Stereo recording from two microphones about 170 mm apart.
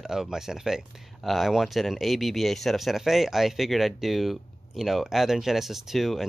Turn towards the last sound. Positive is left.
turn(degrees=0)  # may be behind; listen again after turning